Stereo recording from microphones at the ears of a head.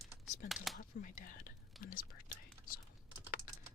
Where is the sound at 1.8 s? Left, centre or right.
Left.